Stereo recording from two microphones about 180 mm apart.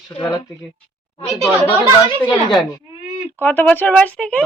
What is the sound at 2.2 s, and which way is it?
Speech, 25° left (ahead or behind).